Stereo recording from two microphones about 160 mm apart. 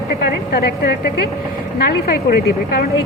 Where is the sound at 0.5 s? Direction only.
90° left.